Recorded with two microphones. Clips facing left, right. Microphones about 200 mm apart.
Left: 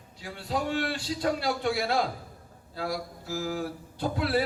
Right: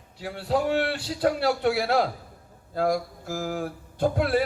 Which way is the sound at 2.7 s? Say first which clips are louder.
Right 8 dB; 50° right (ahead or behind).